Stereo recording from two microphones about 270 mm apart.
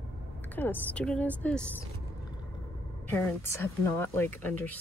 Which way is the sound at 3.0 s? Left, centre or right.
Centre.